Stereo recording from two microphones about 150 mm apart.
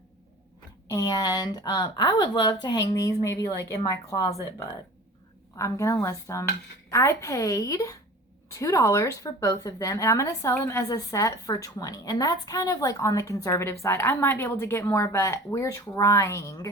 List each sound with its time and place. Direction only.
0.9 s a woman's voice: 25° left (ahead or behind)
5.5 s a woman's voice: 20° left (ahead or behind)